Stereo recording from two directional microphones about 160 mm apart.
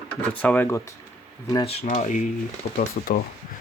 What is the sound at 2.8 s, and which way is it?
Speech, 60° left (ahead or behind).